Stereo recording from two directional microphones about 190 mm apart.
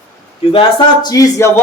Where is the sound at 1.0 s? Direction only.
15° left (ahead or behind).